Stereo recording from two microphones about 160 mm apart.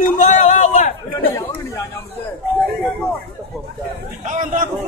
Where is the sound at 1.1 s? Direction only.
20° left (ahead or behind).